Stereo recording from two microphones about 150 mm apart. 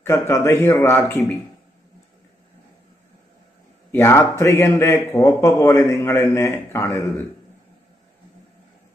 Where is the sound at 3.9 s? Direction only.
15° left (ahead or behind).